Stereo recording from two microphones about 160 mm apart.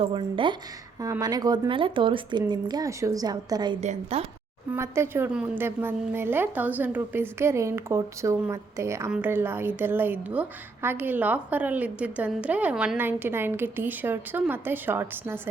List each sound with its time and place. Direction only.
0.0 s speech: 35° right (ahead or behind)
1.0 s speech: 20° right (ahead or behind)
3.8 s speech: 40° right (ahead or behind)
4.7 s a woman's voice: 15° right (ahead or behind)